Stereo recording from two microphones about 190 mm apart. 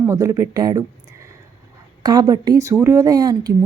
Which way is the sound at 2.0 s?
20° right (ahead or behind).